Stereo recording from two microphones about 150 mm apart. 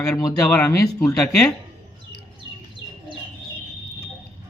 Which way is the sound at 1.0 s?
5° left (ahead or behind).